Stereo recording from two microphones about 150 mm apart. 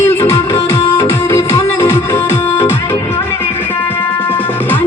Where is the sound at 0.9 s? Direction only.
25° left (ahead or behind).